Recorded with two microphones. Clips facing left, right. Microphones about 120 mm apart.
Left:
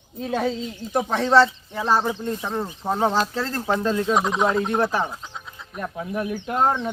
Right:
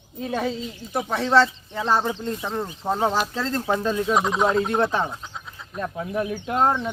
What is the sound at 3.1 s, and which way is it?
Speech, 10° right (ahead or behind).